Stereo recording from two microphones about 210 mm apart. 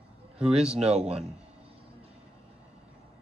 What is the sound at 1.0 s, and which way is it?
Speech, 30° right (ahead or behind).